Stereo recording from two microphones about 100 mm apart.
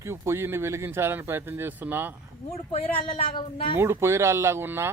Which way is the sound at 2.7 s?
85° left.